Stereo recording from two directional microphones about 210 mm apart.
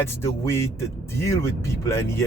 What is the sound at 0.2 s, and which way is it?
Speech, 10° left (ahead or behind).